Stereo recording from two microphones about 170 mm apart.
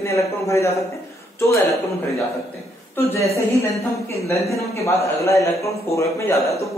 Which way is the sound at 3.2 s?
40° left (ahead or behind).